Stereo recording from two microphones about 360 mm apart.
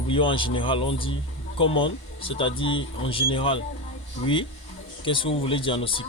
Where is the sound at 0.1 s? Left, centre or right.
Centre.